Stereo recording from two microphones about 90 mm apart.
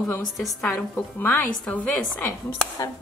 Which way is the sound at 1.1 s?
20° left (ahead or behind).